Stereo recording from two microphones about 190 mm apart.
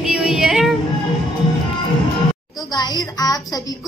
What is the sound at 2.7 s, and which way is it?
Speech, 20° left (ahead or behind).